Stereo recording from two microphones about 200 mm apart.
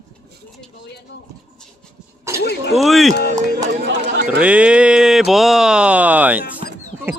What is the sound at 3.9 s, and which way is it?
Speech, 60° right (ahead or behind).